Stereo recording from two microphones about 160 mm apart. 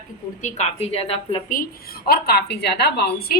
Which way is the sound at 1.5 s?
65° left (ahead or behind).